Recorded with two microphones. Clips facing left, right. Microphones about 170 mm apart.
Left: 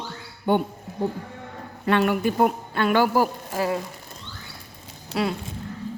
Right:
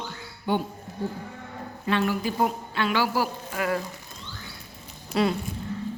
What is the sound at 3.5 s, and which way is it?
Speech, 30° left (ahead or behind).